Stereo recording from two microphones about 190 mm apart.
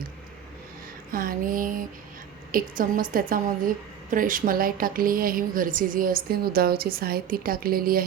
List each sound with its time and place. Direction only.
1.1 s a woman's voice: 50° right (ahead or behind)